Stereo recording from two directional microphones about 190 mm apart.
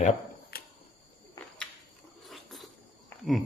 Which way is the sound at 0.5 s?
55° left (ahead or behind).